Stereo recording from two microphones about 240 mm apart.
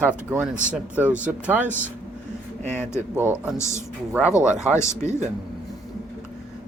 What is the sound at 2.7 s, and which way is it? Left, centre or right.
Speech, centre.